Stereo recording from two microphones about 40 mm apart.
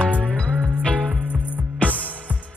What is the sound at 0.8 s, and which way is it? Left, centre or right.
Music, centre.